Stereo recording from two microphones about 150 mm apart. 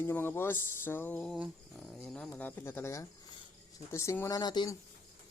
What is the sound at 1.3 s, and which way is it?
Dog, centre (ahead or behind).